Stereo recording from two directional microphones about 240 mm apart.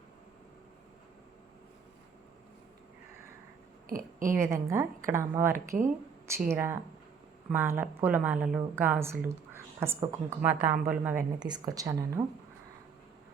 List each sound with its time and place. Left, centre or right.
3.8 s a sound: right
4.4 s speech: centre
5.5 s speech: right
6.5 s speech: centre
11.3 s speech: centre